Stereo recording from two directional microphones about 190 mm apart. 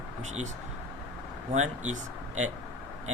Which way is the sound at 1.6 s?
40° right (ahead or behind).